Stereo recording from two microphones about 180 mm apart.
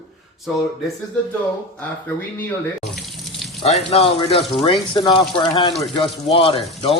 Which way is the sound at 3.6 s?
35° left (ahead or behind).